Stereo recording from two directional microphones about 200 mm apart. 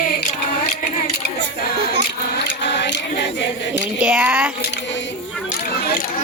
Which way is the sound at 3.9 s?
5° right (ahead or behind).